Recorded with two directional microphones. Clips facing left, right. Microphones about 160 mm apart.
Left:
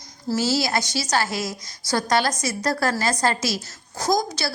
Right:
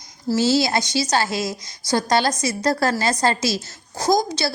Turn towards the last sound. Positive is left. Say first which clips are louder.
# right 3 dB
turn(degrees=-25)  # may be behind; listen again after turning